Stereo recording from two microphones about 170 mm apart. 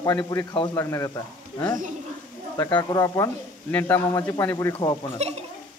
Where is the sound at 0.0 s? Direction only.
20° left (ahead or behind).